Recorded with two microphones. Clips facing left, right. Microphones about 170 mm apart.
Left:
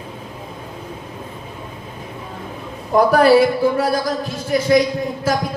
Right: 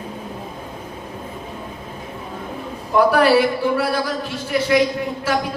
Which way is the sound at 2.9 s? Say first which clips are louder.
Left 2 dB; 40° left (ahead or behind).